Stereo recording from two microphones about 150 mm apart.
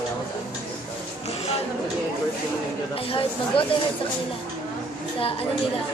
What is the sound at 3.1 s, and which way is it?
Speech, 35° left (ahead or behind).